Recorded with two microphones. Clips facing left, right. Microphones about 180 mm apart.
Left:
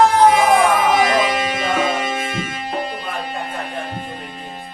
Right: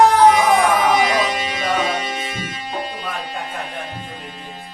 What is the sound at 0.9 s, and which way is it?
Music, 45° left (ahead or behind).